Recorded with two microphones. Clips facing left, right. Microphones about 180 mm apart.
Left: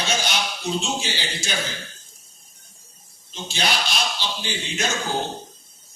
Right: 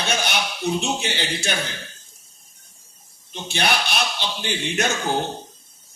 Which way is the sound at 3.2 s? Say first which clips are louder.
Right 3 dB; 60° right (ahead or behind).